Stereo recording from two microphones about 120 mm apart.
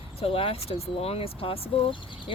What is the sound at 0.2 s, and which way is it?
Speech, 50° left (ahead or behind).